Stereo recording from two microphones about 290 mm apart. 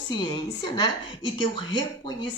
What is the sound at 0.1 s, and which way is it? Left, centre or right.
A woman's voice, centre.